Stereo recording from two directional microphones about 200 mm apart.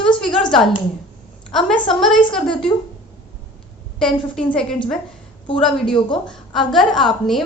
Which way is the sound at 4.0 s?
5° left (ahead or behind).